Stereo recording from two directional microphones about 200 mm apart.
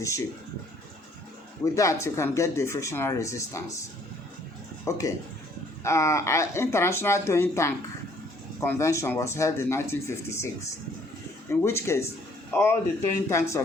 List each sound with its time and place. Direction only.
1.6 s speech: 15° left (ahead or behind)
4.9 s speech: 15° left (ahead or behind)
11.6 s speech: 15° left (ahead or behind)